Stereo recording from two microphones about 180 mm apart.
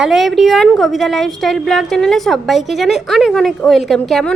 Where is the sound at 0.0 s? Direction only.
Centre (ahead or behind).